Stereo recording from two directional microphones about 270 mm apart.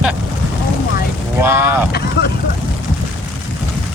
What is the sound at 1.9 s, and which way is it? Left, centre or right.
Speech, left.